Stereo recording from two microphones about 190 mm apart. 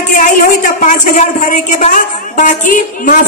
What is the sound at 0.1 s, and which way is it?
A woman's voice, 45° left (ahead or behind).